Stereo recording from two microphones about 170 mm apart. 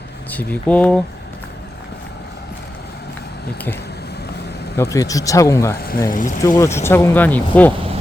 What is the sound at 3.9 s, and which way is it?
Vehicle, 70° left (ahead or behind).